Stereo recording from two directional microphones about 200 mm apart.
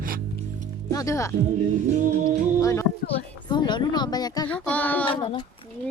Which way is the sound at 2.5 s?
15° left (ahead or behind).